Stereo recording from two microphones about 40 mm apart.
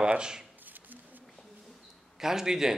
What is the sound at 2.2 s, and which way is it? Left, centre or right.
Speech, centre.